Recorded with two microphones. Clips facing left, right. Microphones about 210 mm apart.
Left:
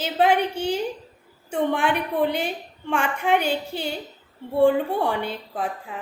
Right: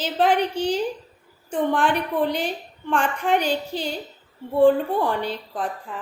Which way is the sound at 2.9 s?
10° left (ahead or behind).